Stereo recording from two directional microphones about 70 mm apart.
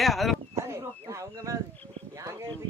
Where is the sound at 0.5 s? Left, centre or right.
Right.